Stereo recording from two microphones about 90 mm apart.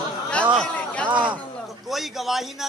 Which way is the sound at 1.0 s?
60° right (ahead or behind).